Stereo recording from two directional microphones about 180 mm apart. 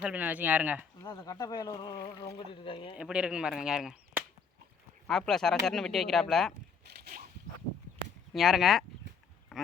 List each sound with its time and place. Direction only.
0.0 s speech: 10° right (ahead or behind)
1.0 s speech: 20° left (ahead or behind)
2.9 s speech: 5° right (ahead or behind)
6.8 s a sound: 65° right (ahead or behind)
8.3 s speech: centre (ahead or behind)